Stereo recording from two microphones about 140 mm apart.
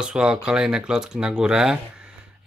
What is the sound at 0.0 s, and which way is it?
Speech, 5° right (ahead or behind).